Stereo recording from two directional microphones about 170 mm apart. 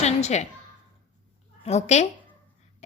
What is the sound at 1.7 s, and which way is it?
Speech, 40° left (ahead or behind).